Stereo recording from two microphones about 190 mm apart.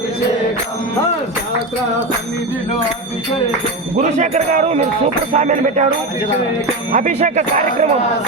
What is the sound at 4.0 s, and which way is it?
Speech, 35° right (ahead or behind).